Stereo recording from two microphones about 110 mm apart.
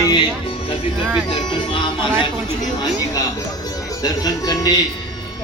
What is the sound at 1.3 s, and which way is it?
Music, 45° left (ahead or behind).